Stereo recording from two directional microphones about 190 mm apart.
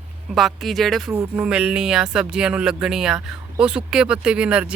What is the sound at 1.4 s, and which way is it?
Speech, 5° right (ahead or behind).